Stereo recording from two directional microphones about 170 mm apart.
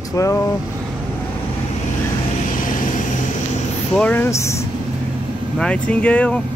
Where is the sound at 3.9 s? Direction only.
10° left (ahead or behind).